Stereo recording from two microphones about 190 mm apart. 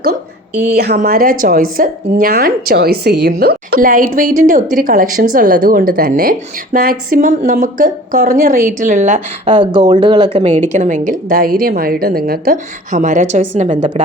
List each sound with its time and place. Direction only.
1.0 s a woman's voice: 50° right (ahead or behind)
9.5 s a woman's voice: 25° right (ahead or behind)